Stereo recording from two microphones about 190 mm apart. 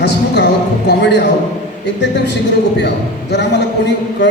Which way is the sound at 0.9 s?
65° left (ahead or behind).